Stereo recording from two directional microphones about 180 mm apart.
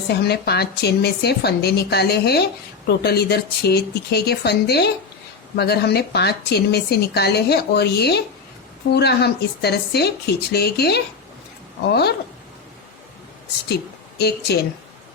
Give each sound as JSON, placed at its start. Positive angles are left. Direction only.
{"t": 0.1, "sound": "speech", "side_deg": 65}
{"t": 14.2, "sound": "speech", "side_deg": 65}